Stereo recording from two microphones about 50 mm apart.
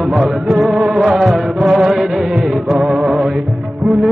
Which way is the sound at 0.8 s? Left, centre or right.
Centre.